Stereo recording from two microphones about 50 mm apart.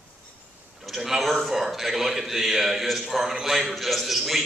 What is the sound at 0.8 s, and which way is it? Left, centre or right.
A man's voice, centre.